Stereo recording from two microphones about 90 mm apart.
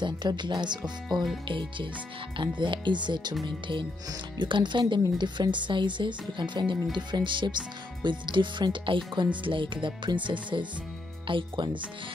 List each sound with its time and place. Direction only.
0.0 s speech: 55° right (ahead or behind)
1.0 s speech: centre (ahead or behind)
1.5 s speech: 65° right (ahead or behind)